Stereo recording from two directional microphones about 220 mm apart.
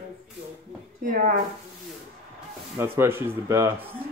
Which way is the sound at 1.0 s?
35° right (ahead or behind).